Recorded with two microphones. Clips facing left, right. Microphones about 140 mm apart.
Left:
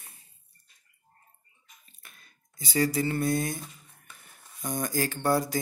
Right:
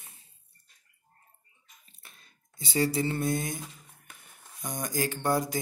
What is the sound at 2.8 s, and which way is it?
Mantra, 25° right (ahead or behind).